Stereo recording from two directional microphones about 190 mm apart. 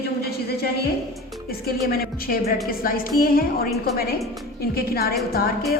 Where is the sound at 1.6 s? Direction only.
50° left (ahead or behind).